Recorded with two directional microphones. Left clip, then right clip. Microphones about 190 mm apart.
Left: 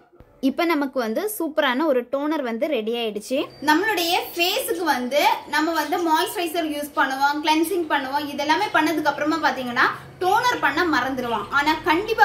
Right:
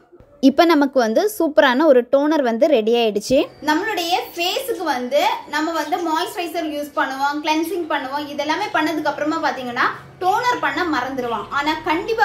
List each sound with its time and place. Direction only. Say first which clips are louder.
0.4 s speech: right 8 dB; 25° right (ahead or behind)
3.6 s a woman's voice: even; centre (ahead or behind)